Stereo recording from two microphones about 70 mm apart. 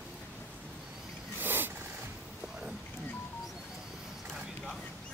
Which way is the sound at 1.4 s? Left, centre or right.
Right.